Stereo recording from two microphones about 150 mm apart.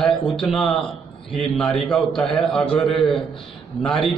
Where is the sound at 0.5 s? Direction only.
Centre (ahead or behind).